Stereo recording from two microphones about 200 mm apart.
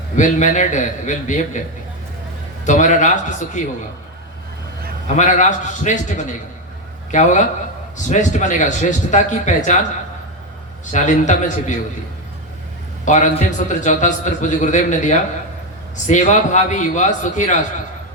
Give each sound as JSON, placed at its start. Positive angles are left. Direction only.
{"t": 0.2, "sound": "a man's voice", "side_deg": 40}
{"t": 2.6, "sound": "a man's voice", "side_deg": 40}
{"t": 5.0, "sound": "a man's voice", "side_deg": 35}
{"t": 10.9, "sound": "a man's voice", "side_deg": 40}
{"t": 13.1, "sound": "a man's voice", "side_deg": 40}